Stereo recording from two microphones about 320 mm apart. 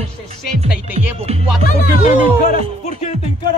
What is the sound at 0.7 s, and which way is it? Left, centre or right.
Music, centre.